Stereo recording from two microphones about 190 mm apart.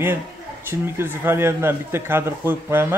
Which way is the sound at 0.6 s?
10° right (ahead or behind).